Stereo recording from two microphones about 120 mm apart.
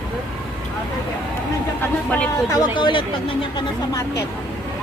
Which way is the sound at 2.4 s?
30° left (ahead or behind).